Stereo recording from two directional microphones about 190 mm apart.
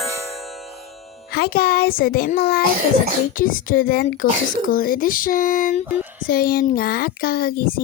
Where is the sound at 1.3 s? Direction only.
55° left (ahead or behind).